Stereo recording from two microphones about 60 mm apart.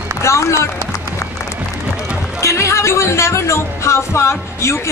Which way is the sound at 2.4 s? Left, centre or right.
Left.